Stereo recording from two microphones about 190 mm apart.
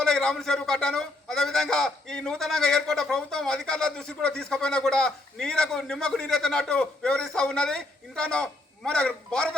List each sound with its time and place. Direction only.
0.0 s a man's voice: 5° left (ahead or behind)